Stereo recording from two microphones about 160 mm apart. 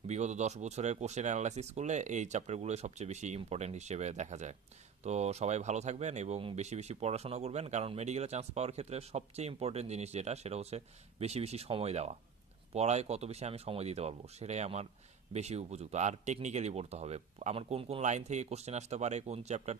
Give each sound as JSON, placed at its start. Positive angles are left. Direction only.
{"t": 0.0, "sound": "speech", "side_deg": -45}